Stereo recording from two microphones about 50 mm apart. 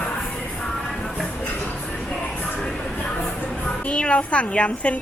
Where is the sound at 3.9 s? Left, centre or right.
Left.